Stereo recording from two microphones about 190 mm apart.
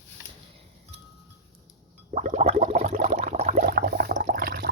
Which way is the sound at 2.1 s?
40° right (ahead or behind).